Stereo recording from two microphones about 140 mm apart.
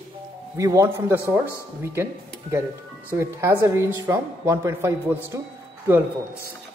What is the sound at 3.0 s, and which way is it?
A man's voice, 20° right (ahead or behind).